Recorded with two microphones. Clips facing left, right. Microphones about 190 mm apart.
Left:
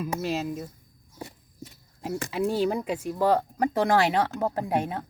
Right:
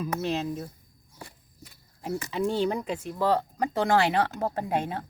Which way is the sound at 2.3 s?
5° left (ahead or behind).